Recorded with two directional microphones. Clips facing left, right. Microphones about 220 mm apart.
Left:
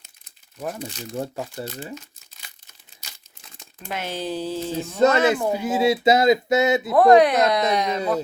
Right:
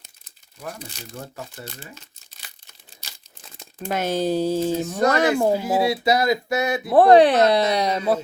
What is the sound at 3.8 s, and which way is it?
Speech, 45° right (ahead or behind).